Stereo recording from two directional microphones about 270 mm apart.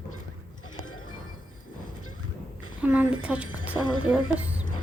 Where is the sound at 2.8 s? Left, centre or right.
Centre.